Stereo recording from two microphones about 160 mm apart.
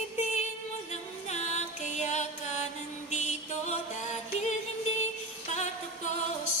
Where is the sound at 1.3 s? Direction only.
45° left (ahead or behind).